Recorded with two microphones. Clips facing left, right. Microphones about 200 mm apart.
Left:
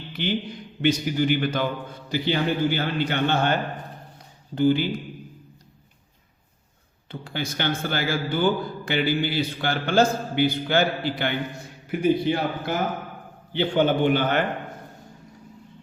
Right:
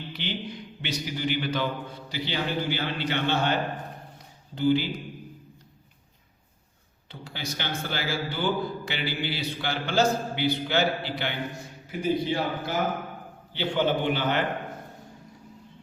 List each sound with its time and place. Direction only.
0.1 s a sound: 50° left (ahead or behind)
0.8 s a man's voice: 50° left (ahead or behind)
7.1 s a man's voice: 55° left (ahead or behind)